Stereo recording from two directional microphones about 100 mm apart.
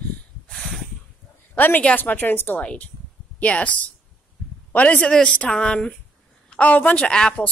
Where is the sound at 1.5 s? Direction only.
20° left (ahead or behind).